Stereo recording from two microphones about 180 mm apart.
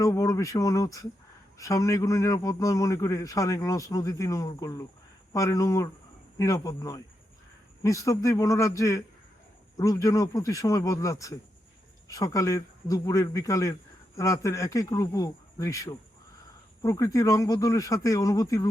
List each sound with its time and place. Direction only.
0.0 s a man's voice: 20° left (ahead or behind)